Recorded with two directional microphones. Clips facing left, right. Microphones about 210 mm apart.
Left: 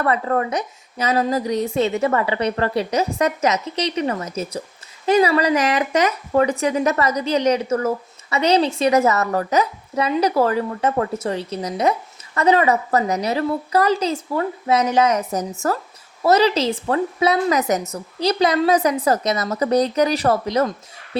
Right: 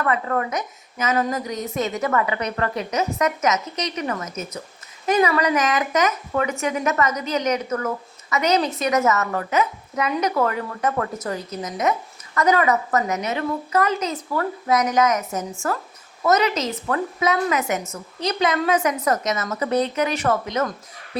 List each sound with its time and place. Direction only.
0.0 s speech: 35° left (ahead or behind)